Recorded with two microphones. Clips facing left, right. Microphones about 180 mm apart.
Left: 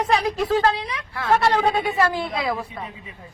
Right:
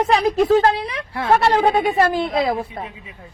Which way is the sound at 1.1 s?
25° right (ahead or behind).